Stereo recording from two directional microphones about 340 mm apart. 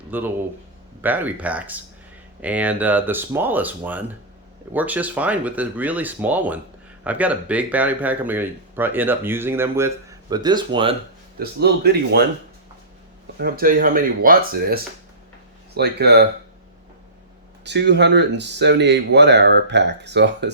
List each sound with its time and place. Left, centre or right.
0.1 s speech: centre
11.3 s speech: right
13.4 s speech: right
17.6 s speech: right